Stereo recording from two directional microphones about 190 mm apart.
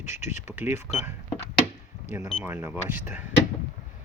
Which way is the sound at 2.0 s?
15° right (ahead or behind).